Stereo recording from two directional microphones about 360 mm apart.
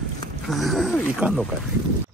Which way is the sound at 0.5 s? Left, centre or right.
Centre.